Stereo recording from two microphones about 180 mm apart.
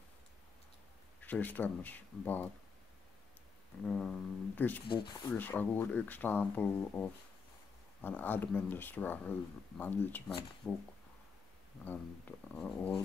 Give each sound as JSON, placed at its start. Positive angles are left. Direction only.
{"t": 1.2, "sound": "speech", "side_deg": 10}
{"t": 3.8, "sound": "music", "side_deg": 5}
{"t": 4.6, "sound": "speech", "side_deg": 10}
{"t": 4.8, "sound": "speech", "side_deg": 25}
{"t": 5.3, "sound": "speech", "side_deg": 10}
{"t": 12.5, "sound": "speech", "side_deg": 5}